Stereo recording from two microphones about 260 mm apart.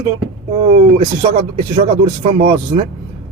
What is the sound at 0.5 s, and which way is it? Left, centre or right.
Speech, right.